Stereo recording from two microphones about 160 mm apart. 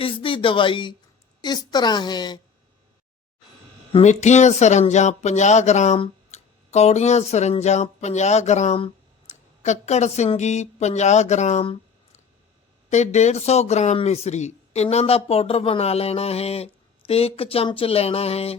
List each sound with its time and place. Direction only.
0.0 s a woman's voice: 35° left (ahead or behind)
3.9 s speech: 45° left (ahead or behind)
12.9 s speech: 45° left (ahead or behind)